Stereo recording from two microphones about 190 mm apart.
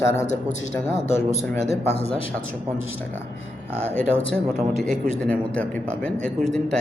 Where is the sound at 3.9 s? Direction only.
10° left (ahead or behind).